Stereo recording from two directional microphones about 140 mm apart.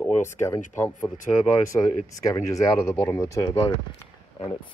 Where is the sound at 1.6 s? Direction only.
25° left (ahead or behind).